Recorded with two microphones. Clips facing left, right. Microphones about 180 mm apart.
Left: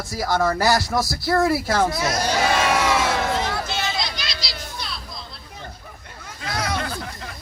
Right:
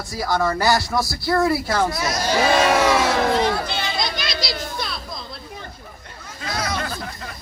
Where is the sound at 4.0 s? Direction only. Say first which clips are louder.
Right 4 dB; 50° right (ahead or behind).